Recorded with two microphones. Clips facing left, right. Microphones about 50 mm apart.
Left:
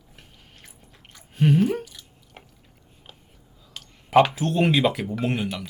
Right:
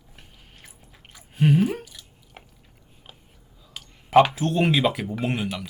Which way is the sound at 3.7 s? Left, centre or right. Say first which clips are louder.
Right 1 dB; centre.